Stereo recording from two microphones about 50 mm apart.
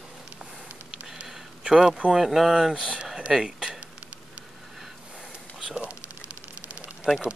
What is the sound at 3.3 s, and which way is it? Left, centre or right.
Speech, centre.